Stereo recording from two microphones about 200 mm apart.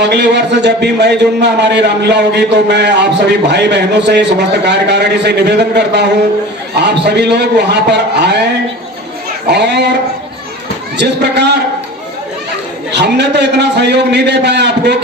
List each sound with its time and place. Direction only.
0.0 s a man's voice: 60° right (ahead or behind)
9.5 s a man's voice: 55° right (ahead or behind)
10.9 s a man's voice: 55° right (ahead or behind)
12.9 s a man's voice: 60° right (ahead or behind)